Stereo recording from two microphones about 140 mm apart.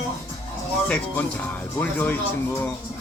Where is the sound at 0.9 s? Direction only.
10° left (ahead or behind).